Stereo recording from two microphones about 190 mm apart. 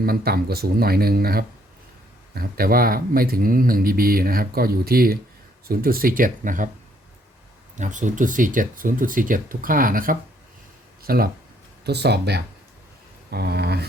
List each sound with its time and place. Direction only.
0.0 s speech: 50° right (ahead or behind)
7.8 s speech: 40° right (ahead or behind); by 13.8 s 60° right (ahead or behind)